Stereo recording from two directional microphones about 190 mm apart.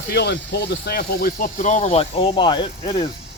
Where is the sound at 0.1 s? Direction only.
60° left (ahead or behind).